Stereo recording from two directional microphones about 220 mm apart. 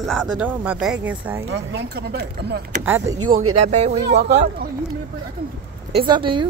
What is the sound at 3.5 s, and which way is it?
Speech, 30° right (ahead or behind).